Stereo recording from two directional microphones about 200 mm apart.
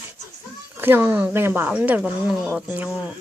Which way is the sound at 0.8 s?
10° right (ahead or behind).